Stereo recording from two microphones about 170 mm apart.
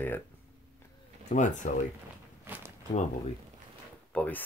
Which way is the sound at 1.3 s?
45° left (ahead or behind).